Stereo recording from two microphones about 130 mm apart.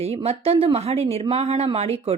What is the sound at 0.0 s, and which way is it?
Speech, 50° right (ahead or behind).